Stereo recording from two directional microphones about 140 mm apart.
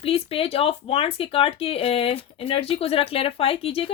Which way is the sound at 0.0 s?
45° left (ahead or behind).